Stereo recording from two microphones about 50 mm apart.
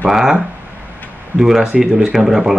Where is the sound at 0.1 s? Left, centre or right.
Centre.